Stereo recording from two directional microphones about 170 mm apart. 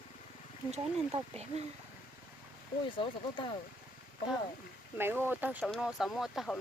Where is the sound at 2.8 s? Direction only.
30° left (ahead or behind).